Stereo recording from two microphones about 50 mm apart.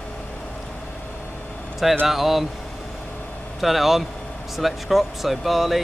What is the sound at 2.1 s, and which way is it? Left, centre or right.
Speech, centre.